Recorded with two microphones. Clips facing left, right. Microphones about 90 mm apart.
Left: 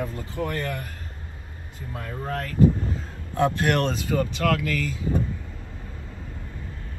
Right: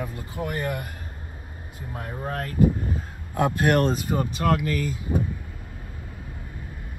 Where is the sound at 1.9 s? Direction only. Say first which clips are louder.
Even; 25° right (ahead or behind).